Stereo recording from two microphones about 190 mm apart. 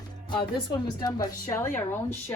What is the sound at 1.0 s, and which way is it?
Speech, 20° left (ahead or behind).